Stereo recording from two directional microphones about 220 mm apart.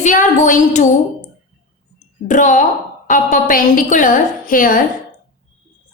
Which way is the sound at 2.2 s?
35° left (ahead or behind).